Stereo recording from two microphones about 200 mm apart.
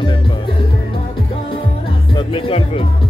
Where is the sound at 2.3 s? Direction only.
30° left (ahead or behind).